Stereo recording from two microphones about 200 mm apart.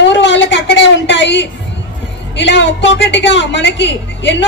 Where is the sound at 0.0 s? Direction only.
65° left (ahead or behind).